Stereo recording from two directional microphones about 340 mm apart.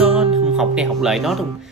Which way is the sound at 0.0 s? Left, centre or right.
Centre.